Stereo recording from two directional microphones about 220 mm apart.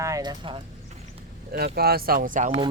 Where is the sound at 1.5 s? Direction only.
45° right (ahead or behind).